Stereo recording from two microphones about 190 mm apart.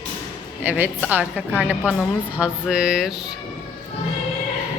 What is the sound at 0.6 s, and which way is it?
A woman's voice, 10° right (ahead or behind).